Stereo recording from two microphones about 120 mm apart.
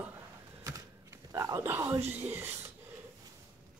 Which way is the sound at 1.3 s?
30° right (ahead or behind).